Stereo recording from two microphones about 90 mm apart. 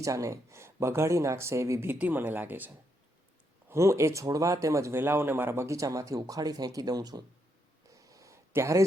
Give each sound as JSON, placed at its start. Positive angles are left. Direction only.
{"t": 0.0, "sound": "speech", "side_deg": -35}
{"t": 3.7, "sound": "speech", "side_deg": -30}
{"t": 7.9, "sound": "a sound", "side_deg": -40}